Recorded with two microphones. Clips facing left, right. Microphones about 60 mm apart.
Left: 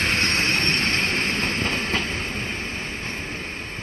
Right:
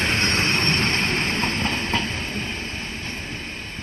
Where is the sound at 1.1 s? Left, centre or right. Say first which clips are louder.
Right 1 dB; centre.